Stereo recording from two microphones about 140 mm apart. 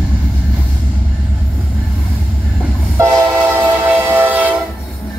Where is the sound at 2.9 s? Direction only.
20° right (ahead or behind).